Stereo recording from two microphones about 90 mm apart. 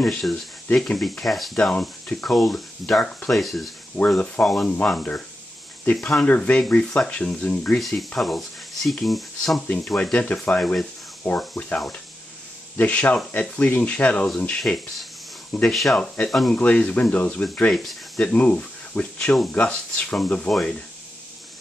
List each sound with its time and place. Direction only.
0.0 s speech: 5° left (ahead or behind)
1.6 s speech: 15° left (ahead or behind)
2.2 s speech: 5° left (ahead or behind)
6.2 s speech: 15° left (ahead or behind)
7.8 s speech: centre (ahead or behind)
10.1 s speech: 15° left (ahead or behind)
14.6 s speech: centre (ahead or behind)
17.7 s a sound: centre (ahead or behind)
18.2 s speech: 15° left (ahead or behind)